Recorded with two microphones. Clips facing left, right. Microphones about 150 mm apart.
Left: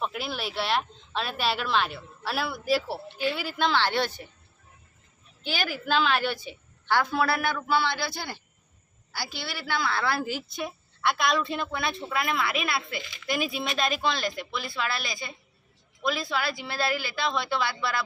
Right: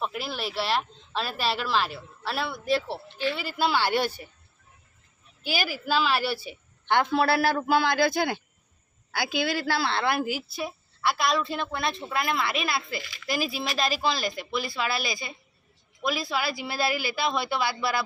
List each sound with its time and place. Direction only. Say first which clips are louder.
0.0 s a woman's voice: even; centre (ahead or behind)
3.7 s speech: right 1 dB; 10° right (ahead or behind)
5.4 s speech: right 1 dB; 10° right (ahead or behind)
6.8 s a man's voice: right 2 dB; 25° right (ahead or behind); by 8.4 s 45° right (ahead or behind)
9.6 s a woman's voice: right 2 dB; 30° right (ahead or behind); by 18.0 s 5° right (ahead or behind)